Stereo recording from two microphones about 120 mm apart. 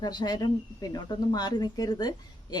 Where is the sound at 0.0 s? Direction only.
35° left (ahead or behind).